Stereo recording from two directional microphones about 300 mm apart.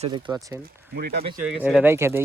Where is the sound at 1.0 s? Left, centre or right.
Right.